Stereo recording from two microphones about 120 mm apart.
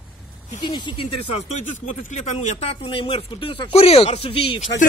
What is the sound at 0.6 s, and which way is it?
Speech, 40° left (ahead or behind).